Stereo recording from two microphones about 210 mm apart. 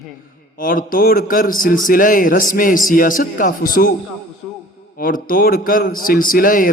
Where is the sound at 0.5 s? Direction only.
40° left (ahead or behind).